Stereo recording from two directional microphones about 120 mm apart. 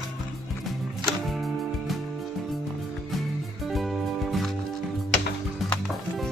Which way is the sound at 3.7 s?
Centre (ahead or behind).